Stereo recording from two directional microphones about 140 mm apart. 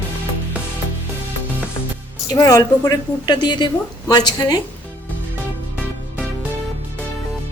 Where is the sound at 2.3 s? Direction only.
25° left (ahead or behind).